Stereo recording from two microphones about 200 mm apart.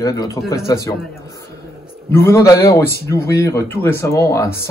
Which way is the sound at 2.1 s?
10° left (ahead or behind).